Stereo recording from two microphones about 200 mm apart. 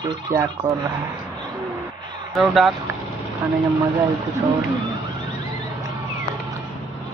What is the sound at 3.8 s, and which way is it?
Speech, 15° right (ahead or behind).